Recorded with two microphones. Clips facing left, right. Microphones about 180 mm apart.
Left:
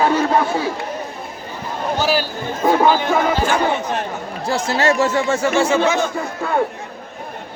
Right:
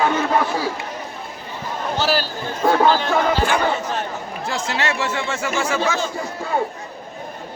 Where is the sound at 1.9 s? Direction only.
15° left (ahead or behind).